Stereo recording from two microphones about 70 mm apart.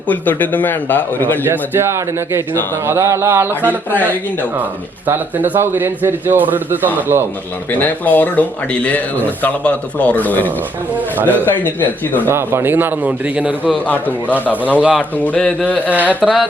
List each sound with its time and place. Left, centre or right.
0.1 s speech: left
1.5 s speech: right
3.9 s speech: left
5.0 s a man's voice: right
7.7 s speech: left
10.9 s a man's voice: right
11.6 s speech: left
12.3 s a man's voice: right; by 13.7 s centre
13.8 s speech: left
14.8 s a man's voice: centre
15.1 s speech: left
16.2 s carnatic music: centre